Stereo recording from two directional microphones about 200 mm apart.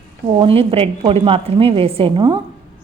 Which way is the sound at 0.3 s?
25° right (ahead or behind).